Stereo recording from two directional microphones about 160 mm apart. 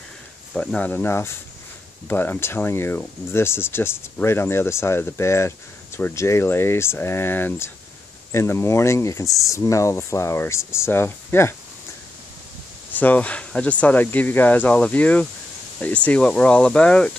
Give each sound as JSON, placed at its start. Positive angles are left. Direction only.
{"t": 0.6, "sound": "speech", "side_deg": 10}
{"t": 12.9, "sound": "speech", "side_deg": 10}